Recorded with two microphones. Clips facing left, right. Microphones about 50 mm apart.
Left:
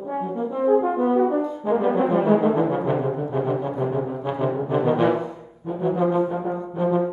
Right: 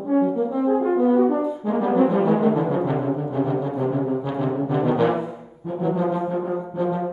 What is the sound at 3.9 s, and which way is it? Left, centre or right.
Brass instrument, left.